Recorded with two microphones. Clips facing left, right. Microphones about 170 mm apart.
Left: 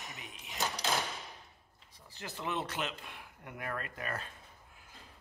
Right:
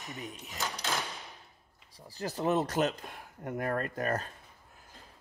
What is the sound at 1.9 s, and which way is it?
Speech, 35° right (ahead or behind).